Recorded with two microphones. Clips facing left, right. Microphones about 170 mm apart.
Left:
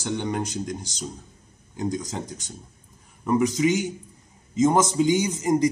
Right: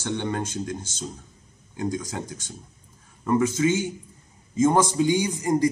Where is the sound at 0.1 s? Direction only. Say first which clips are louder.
Left 1 dB; 10° left (ahead or behind).